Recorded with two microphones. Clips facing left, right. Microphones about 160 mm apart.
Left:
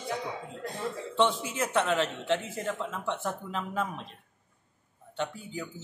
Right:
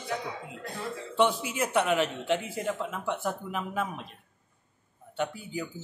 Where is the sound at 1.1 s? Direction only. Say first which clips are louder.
Right 2 dB; 10° right (ahead or behind).